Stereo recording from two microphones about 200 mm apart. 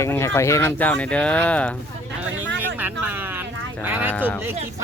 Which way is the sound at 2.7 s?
10° right (ahead or behind).